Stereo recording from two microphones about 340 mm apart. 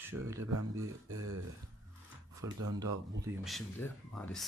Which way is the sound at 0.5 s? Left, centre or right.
Right.